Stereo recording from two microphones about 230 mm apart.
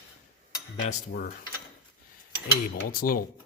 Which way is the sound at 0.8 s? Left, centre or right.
Left.